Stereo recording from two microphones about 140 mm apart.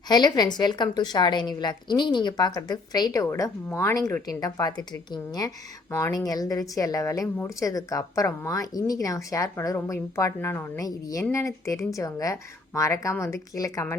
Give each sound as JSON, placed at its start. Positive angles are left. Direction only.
{"t": 0.1, "sound": "a woman's voice", "side_deg": 30}